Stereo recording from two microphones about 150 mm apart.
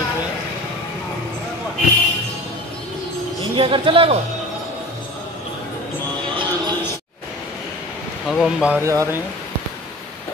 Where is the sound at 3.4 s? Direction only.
35° right (ahead or behind).